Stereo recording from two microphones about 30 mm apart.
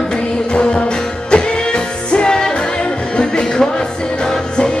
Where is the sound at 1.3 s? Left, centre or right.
Left.